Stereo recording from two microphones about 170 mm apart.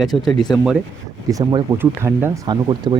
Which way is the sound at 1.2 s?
20° right (ahead or behind).